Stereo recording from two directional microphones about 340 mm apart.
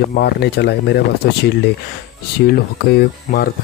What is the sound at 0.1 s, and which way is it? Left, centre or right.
Speech, left.